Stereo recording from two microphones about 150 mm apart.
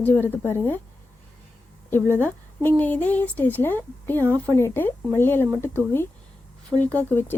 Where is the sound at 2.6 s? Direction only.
10° left (ahead or behind).